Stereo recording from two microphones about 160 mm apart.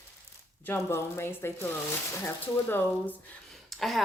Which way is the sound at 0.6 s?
15° left (ahead or behind).